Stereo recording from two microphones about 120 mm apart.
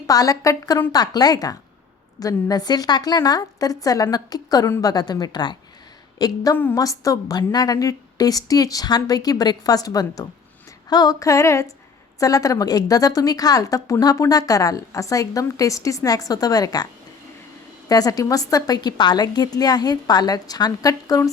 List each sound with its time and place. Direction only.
0.1 s a woman's voice: 30° left (ahead or behind)